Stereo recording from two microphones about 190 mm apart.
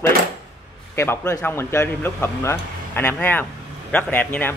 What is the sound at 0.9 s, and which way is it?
A man's voice, 15° left (ahead or behind).